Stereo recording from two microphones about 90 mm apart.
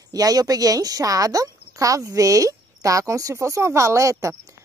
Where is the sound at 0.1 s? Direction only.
45° right (ahead or behind).